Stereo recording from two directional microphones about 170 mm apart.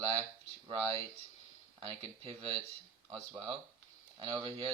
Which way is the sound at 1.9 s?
35° right (ahead or behind).